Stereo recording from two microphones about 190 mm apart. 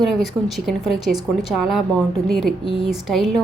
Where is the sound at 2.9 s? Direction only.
Centre (ahead or behind).